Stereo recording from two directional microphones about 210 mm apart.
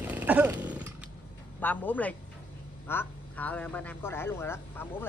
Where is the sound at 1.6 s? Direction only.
10° left (ahead or behind).